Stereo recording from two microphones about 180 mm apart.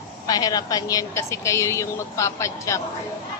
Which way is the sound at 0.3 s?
20° left (ahead or behind).